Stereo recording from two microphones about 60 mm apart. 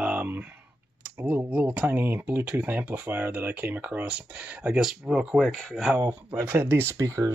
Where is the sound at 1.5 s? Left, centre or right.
Right.